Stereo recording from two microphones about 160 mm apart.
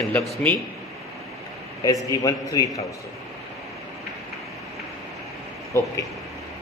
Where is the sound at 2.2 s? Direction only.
20° left (ahead or behind).